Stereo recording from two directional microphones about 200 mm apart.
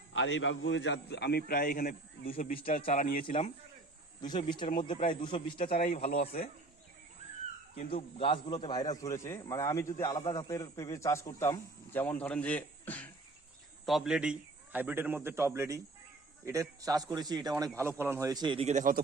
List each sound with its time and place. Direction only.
0.1 s a man's voice: 70° left (ahead or behind); by 2.3 s 45° left (ahead or behind)
2.3 s a man's voice: 30° left (ahead or behind)
2.8 s speech: 40° left (ahead or behind)
4.2 s a man's voice: 20° left (ahead or behind)
7.9 s a man's voice: 25° left (ahead or behind); by 19.0 s 40° right (ahead or behind)